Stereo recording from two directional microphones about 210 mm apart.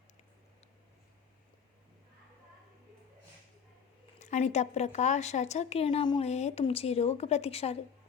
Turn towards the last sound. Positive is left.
turn(degrees=30)  # may be behind; listen again after turning